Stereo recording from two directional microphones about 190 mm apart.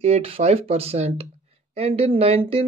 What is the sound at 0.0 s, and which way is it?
Speech, 30° right (ahead or behind).